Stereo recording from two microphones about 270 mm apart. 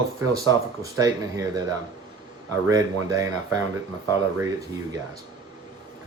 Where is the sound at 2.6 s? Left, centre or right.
Centre.